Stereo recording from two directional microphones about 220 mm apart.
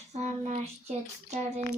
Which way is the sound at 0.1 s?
30° right (ahead or behind).